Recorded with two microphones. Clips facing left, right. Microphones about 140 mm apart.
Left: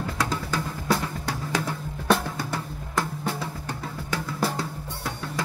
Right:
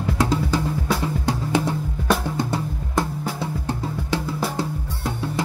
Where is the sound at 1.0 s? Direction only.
25° right (ahead or behind).